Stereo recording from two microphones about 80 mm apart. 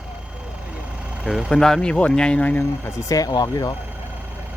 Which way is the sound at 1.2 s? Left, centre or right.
Centre.